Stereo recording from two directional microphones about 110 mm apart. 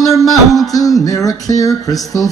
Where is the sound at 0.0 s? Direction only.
30° left (ahead or behind).